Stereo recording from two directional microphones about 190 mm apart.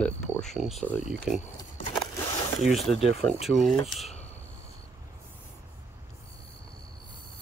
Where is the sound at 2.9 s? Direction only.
30° left (ahead or behind).